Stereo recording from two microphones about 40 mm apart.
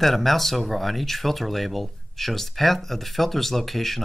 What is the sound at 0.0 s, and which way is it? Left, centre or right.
Speech, centre.